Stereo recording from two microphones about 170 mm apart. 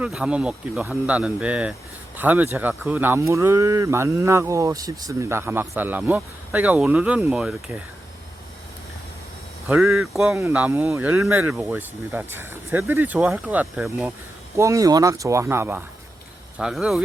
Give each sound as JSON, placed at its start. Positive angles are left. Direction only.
{"t": 0.0, "sound": "speech", "side_deg": -5}
{"t": 9.6, "sound": "speech", "side_deg": -5}
{"t": 14.5, "sound": "speech", "side_deg": -20}